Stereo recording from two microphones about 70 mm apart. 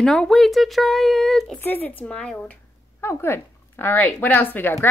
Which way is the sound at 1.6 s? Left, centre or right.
Left.